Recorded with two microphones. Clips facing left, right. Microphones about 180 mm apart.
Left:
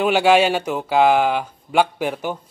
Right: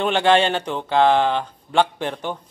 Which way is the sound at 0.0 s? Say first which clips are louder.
Left 2 dB; 10° left (ahead or behind).